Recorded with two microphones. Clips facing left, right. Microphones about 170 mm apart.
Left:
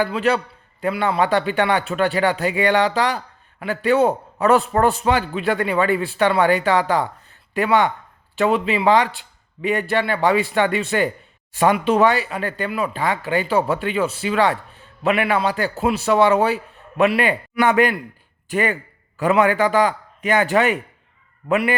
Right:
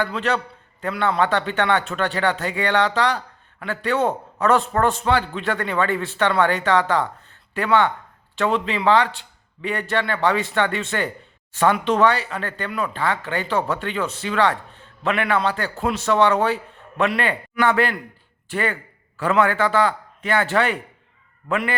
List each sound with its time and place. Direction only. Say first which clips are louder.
0.0 s a man's voice: left 4 dB; 10° left (ahead or behind)